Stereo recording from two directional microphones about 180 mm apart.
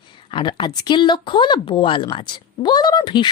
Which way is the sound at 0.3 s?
25° left (ahead or behind).